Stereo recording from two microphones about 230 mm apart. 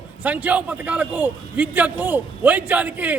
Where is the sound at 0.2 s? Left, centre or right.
Centre.